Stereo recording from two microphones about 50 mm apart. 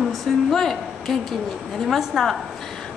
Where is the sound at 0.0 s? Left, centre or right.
Centre.